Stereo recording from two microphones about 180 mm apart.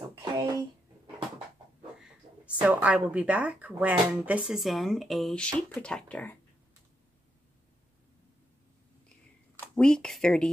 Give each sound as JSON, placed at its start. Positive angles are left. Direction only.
{"t": 0.2, "sound": "a sound", "side_deg": -25}
{"t": 2.0, "sound": "speech", "side_deg": -5}
{"t": 9.6, "sound": "speech", "side_deg": 5}